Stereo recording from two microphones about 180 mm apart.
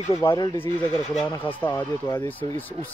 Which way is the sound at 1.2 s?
10° left (ahead or behind).